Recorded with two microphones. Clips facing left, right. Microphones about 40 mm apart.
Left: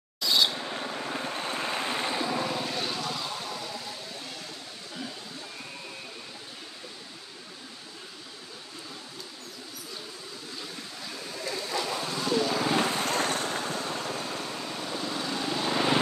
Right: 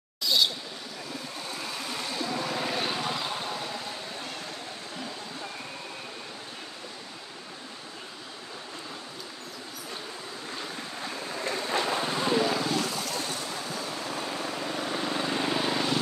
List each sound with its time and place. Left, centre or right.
0.2 s a sound: centre
0.6 s vehicle: left
2.5 s vehicle: centre
11.1 s vehicle: right
12.7 s vehicle: left
14.1 s vehicle: right